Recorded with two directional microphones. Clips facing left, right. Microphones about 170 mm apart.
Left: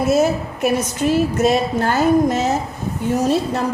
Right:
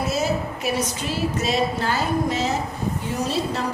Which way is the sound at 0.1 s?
50° left (ahead or behind).